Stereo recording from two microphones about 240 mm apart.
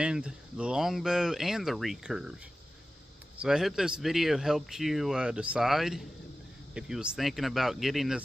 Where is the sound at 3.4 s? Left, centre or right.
Centre.